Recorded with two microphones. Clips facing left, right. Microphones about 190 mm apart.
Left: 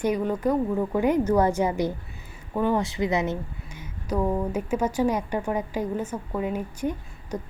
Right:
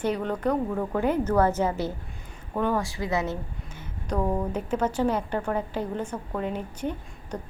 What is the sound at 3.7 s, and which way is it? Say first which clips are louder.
A woman's voice: left 2 dB; 5° left (ahead or behind).